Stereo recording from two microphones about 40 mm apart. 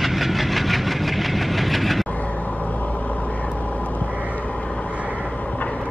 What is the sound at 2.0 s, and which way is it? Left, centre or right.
Vehicle, left.